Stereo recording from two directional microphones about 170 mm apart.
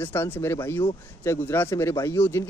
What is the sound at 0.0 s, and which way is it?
Speech, 15° left (ahead or behind).